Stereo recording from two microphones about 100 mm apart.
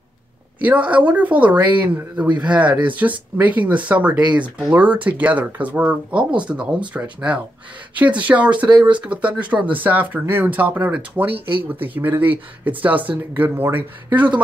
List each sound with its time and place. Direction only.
0.7 s a woman's voice: 15° right (ahead or behind)
11.3 s speech: 60° right (ahead or behind)
11.7 s a woman's voice: 20° right (ahead or behind)